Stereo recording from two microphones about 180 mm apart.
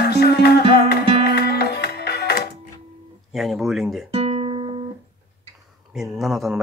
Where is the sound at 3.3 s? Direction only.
Centre (ahead or behind).